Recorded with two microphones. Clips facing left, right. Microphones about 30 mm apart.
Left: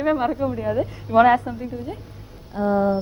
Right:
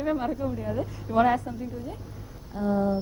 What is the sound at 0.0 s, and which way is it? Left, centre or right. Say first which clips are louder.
A man's voice: left 6 dB; left.